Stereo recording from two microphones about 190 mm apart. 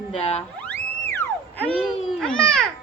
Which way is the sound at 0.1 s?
30° left (ahead or behind).